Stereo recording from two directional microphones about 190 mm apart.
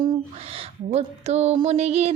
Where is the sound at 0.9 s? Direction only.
35° right (ahead or behind).